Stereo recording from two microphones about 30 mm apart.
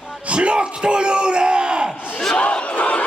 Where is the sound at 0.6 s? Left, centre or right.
Right.